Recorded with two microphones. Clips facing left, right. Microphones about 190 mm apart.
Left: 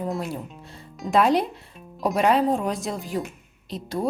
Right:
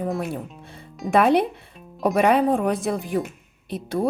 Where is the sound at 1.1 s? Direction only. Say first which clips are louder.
Right 2 dB; 60° right (ahead or behind).